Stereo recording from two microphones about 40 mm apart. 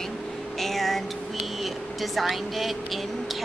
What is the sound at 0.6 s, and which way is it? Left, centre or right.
A woman's voice, centre.